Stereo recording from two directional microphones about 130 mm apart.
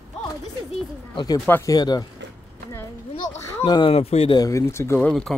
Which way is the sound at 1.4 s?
15° left (ahead or behind).